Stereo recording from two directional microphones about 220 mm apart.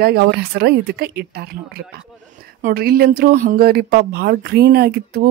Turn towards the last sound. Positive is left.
turn(degrees=-45)  # may be behind; listen again after turning